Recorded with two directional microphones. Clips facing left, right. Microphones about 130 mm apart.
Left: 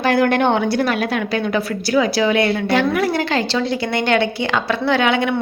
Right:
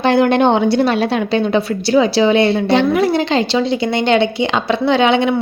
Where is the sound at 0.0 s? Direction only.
25° right (ahead or behind).